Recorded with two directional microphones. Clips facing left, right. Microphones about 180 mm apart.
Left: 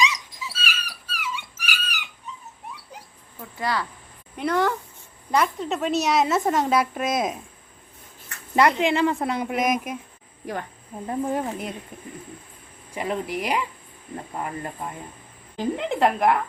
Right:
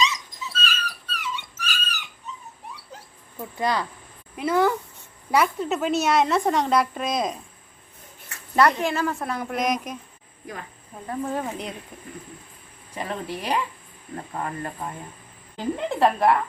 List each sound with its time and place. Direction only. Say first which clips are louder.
0.0 s dog: even; 10° left (ahead or behind)
3.6 s speech: right 2 dB; 20° right (ahead or behind)
4.4 s a woman's voice: right 2 dB; 5° right (ahead or behind)
8.5 s speech: left 1 dB; 15° left (ahead or behind)
9.5 s a woman's voice: left 2 dB; 5° left (ahead or behind)
11.0 s speech: left 2 dB; 20° left (ahead or behind)
15.5 s speech: left 1 dB; 15° left (ahead or behind)